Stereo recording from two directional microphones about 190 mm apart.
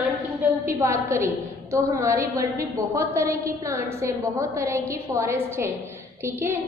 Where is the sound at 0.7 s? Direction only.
15° right (ahead or behind).